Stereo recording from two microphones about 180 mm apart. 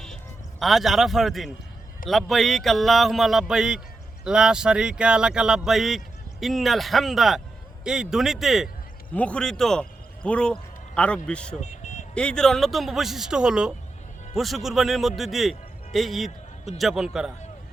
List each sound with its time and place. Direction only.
0.6 s a man's voice: centre (ahead or behind)
11.6 s vehicle: 40° left (ahead or behind)
12.1 s a man's voice: 5° left (ahead or behind)